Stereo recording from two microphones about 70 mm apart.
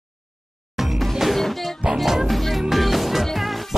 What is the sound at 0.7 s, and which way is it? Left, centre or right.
Music, centre.